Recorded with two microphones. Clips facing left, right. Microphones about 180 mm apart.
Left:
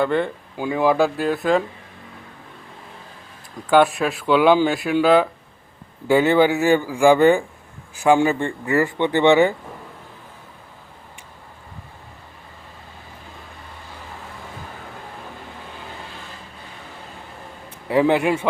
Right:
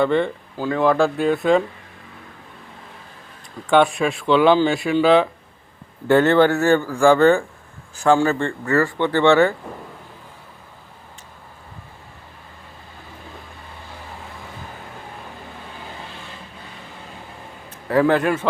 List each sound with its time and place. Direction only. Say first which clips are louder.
0.0 s speech: right 2 dB; 5° left (ahead or behind)
0.5 s speech: even; 15° left (ahead or behind)
3.7 s speech: even; 5° left (ahead or behind)
17.8 s speech: even; 15° left (ahead or behind)